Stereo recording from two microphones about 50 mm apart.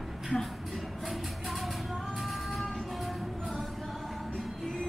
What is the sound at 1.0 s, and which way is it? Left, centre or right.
Music, centre.